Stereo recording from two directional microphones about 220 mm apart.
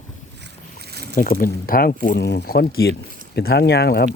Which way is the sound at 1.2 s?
40° left (ahead or behind).